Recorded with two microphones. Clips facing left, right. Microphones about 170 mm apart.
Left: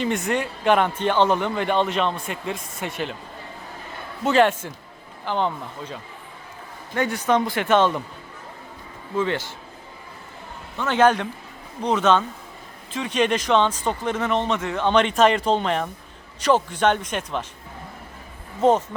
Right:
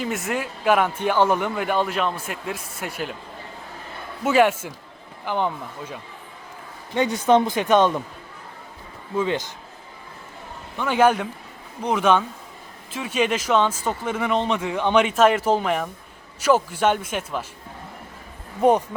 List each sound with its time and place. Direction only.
0.0 s speech: centre (ahead or behind)
4.2 s speech: 10° right (ahead or behind)
9.1 s speech: 15° right (ahead or behind)
10.8 s speech: 10° right (ahead or behind)
18.6 s speech: 15° right (ahead or behind)